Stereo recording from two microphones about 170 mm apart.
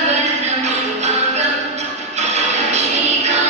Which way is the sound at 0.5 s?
40° right (ahead or behind).